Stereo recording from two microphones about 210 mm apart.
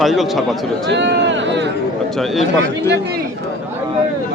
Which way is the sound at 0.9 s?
55° right (ahead or behind).